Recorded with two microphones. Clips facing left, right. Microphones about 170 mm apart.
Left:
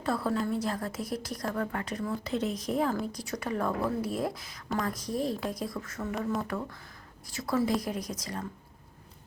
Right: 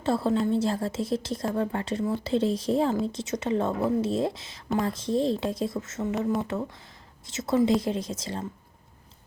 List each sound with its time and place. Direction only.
0.0 s a woman's voice: 25° right (ahead or behind)